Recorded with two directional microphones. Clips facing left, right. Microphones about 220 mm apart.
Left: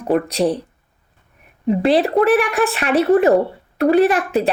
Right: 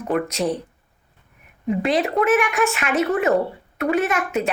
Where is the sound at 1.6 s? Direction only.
35° left (ahead or behind).